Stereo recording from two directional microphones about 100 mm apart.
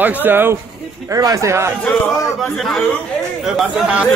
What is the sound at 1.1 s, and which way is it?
Speech, 35° right (ahead or behind).